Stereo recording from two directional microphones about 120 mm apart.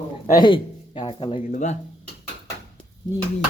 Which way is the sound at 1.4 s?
90° left.